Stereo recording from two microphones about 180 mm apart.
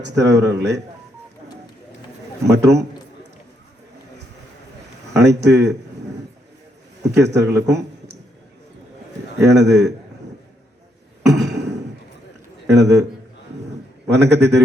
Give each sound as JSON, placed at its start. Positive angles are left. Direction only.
{"t": 0.0, "sound": "a man's voice", "side_deg": -75}
{"t": 2.5, "sound": "a man's voice", "side_deg": -70}
{"t": 5.1, "sound": "a man's voice", "side_deg": -70}
{"t": 7.0, "sound": "a man's voice", "side_deg": -70}
{"t": 7.7, "sound": "a sound", "side_deg": -70}
{"t": 9.4, "sound": "a man's voice", "side_deg": -70}
{"t": 11.3, "sound": "a sound", "side_deg": -70}
{"t": 12.6, "sound": "a man's voice", "side_deg": -70}
{"t": 14.1, "sound": "a man's voice", "side_deg": -70}